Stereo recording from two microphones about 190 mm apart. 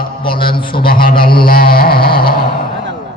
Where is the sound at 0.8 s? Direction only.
50° left (ahead or behind).